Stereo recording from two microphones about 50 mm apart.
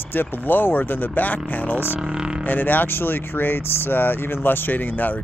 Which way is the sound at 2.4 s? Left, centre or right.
Left.